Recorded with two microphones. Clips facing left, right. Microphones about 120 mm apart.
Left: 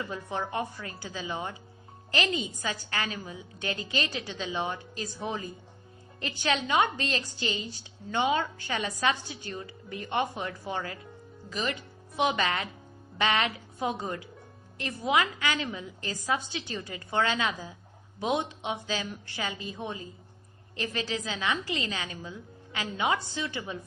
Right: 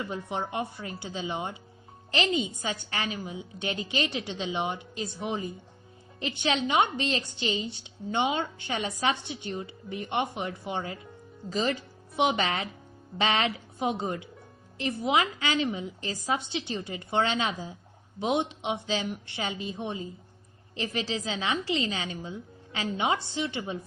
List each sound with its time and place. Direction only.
0.1 s a woman's voice: 20° right (ahead or behind)
11.4 s a woman's voice: 35° right (ahead or behind)